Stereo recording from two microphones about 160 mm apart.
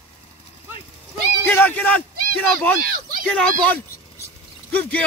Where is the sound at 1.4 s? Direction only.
15° left (ahead or behind).